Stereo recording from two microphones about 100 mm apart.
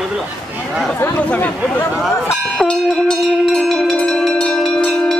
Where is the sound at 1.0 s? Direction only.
20° left (ahead or behind).